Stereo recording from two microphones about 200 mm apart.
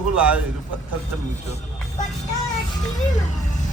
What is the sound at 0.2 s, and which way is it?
Speech, 5° right (ahead or behind).